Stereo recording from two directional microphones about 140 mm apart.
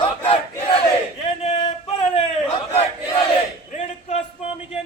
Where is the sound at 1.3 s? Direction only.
45° left (ahead or behind).